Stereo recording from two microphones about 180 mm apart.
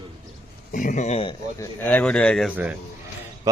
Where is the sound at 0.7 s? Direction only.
45° left (ahead or behind).